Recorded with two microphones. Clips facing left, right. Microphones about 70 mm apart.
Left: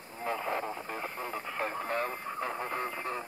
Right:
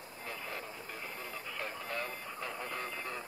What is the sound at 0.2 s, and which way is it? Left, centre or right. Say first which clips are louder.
Radio: left 10 dB; left.